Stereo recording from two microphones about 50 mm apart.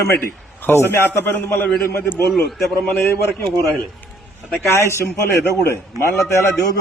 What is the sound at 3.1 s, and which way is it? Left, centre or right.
Speech, left.